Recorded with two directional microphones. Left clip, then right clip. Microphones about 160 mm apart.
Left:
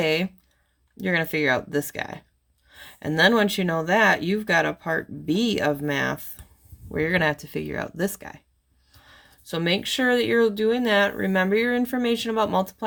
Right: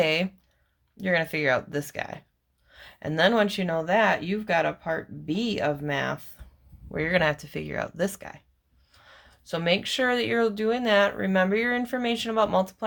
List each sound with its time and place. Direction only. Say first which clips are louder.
0.0 s speech: left 1 dB; 25° left (ahead or behind)
6.8 s speech: left 1 dB; 25° left (ahead or behind)